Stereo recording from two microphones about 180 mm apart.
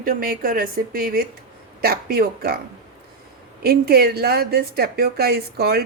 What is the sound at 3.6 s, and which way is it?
A woman's voice, 55° right (ahead or behind).